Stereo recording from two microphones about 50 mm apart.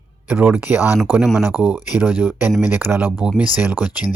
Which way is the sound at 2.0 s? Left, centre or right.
Right.